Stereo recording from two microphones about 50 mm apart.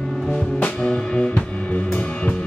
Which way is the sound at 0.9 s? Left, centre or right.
Left.